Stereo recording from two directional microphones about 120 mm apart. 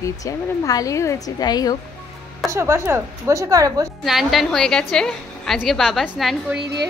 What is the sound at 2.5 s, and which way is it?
A woman's voice, 25° right (ahead or behind).